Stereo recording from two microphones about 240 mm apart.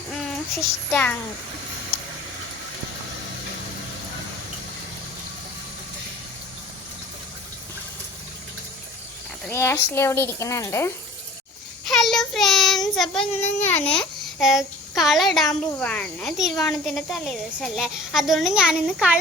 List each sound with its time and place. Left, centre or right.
0.9 s speech: centre
9.5 s speech: centre
11.9 s child singing: centre
12.9 s a woman's voice: centre